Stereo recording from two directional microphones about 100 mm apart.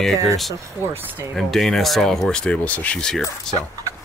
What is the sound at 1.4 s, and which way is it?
Speech, 5° left (ahead or behind).